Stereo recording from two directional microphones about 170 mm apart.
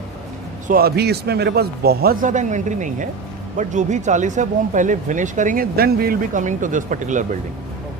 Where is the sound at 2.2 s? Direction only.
45° right (ahead or behind).